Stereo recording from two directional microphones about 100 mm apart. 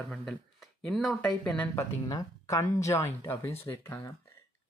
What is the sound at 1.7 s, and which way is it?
Speech, 35° left (ahead or behind).